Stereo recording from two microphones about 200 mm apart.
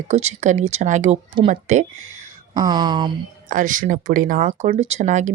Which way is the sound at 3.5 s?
40° right (ahead or behind).